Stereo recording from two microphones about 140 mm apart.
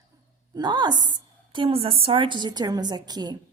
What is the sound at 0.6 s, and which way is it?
A woman's voice, 30° right (ahead or behind).